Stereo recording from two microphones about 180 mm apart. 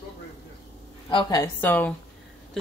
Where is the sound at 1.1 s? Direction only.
25° left (ahead or behind).